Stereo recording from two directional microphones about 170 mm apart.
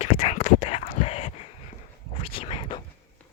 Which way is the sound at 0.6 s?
35° left (ahead or behind).